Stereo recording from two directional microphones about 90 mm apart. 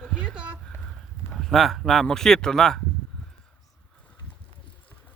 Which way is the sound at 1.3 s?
5° left (ahead or behind).